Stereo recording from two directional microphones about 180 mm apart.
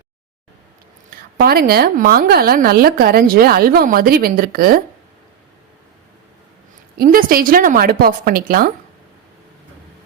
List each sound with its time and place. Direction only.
1.4 s a woman's voice: 60° right (ahead or behind)
6.9 s a woman's voice: 55° right (ahead or behind)